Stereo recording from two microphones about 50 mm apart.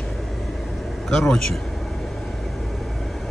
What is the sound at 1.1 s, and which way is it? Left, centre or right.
Speech, centre.